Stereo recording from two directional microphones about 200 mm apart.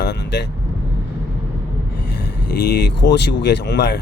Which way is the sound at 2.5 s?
55° left (ahead or behind).